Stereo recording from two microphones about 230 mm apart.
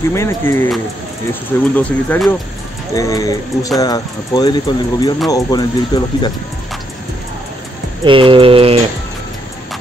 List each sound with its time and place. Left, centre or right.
0.1 s speech: centre
2.9 s speech: centre
8.0 s a sound: right